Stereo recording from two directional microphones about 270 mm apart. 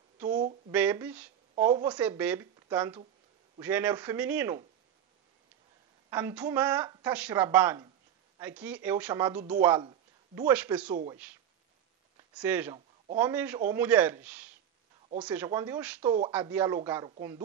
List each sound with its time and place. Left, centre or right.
0.2 s a sound: centre
0.7 s speech: centre
6.0 s a woman's voice: centre
12.4 s speech: centre
12.7 s a sound: centre
13.2 s a woman's voice: centre